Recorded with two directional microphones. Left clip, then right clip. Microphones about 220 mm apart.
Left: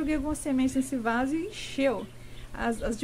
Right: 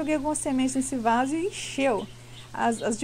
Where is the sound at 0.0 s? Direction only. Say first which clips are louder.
Right 4 dB; 15° right (ahead or behind).